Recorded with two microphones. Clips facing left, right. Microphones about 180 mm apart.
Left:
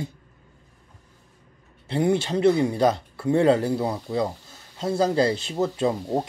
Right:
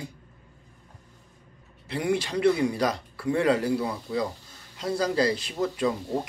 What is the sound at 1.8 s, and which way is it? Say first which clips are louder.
Speech: left 5 dB; 25° left (ahead or behind).